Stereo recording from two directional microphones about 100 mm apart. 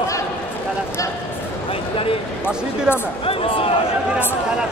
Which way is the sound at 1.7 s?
65° left (ahead or behind).